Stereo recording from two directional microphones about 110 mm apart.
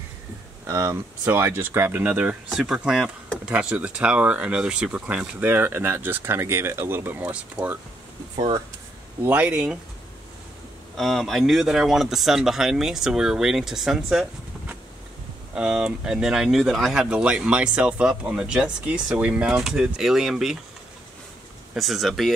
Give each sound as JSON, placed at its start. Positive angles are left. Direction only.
{"t": 0.7, "sound": "speech", "side_deg": -30}
{"t": 1.2, "sound": "speech", "side_deg": -20}
{"t": 9.2, "sound": "speech", "side_deg": -15}
{"t": 11.0, "sound": "speech", "side_deg": 0}
{"t": 15.5, "sound": "speech", "side_deg": -5}
{"t": 21.7, "sound": "speech", "side_deg": 0}